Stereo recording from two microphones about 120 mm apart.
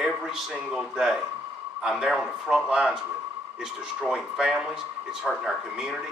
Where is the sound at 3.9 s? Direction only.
5° right (ahead or behind).